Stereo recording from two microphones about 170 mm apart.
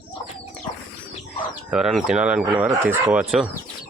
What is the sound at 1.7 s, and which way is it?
Speech, 5° right (ahead or behind).